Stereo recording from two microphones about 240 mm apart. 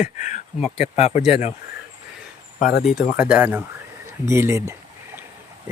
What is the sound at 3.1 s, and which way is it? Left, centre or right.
Speech, centre.